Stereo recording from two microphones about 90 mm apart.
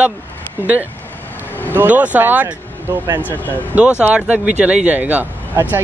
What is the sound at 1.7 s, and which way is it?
Speech, 20° right (ahead or behind).